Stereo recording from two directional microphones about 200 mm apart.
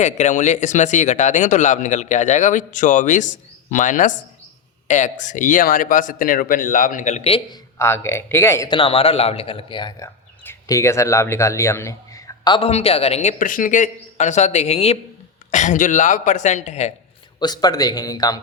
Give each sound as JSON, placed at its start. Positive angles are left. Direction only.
{"t": 0.0, "sound": "speech", "side_deg": 35}
{"t": 7.8, "sound": "speech", "side_deg": 10}
{"t": 8.7, "sound": "speech", "side_deg": 25}
{"t": 12.5, "sound": "speech", "side_deg": 30}
{"t": 17.4, "sound": "speech", "side_deg": 20}